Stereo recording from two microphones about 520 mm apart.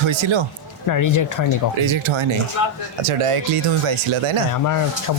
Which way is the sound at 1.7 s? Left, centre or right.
Right.